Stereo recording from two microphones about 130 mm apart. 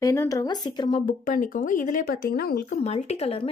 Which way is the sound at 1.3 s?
90° left.